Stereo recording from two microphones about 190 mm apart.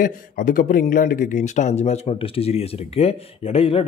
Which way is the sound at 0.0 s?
45° left (ahead or behind).